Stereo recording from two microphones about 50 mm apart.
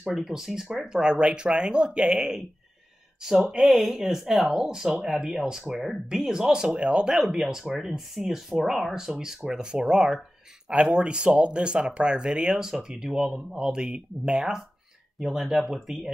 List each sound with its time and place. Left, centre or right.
0.1 s speech: centre
6.7 s speech: right
7.2 s speech: centre
10.7 s speech: right
15.1 s speech: centre